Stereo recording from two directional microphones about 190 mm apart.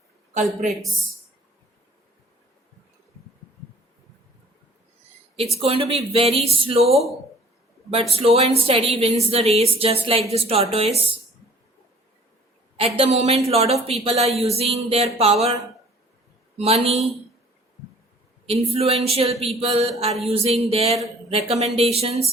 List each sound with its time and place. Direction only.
0.3 s a woman's voice: 40° right (ahead or behind)
5.5 s a woman's voice: 30° right (ahead or behind)
6.9 s speech: centre (ahead or behind)
8.1 s a woman's voice: 30° right (ahead or behind)
13.0 s a woman's voice: 35° right (ahead or behind)
16.6 s a woman's voice: 30° right (ahead or behind)
18.4 s a woman's voice: 30° right (ahead or behind)